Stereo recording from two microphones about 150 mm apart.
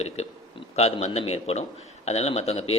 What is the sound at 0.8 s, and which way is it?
A man's voice, 45° left (ahead or behind).